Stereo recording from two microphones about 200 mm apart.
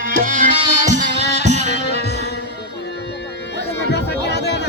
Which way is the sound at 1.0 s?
60° left (ahead or behind).